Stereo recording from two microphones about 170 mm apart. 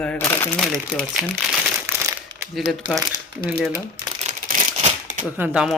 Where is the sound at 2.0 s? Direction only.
15° right (ahead or behind).